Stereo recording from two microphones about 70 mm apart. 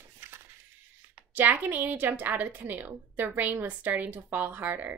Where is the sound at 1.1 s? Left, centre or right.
Right.